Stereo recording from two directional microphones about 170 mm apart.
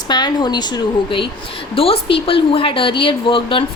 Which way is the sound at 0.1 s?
25° left (ahead or behind).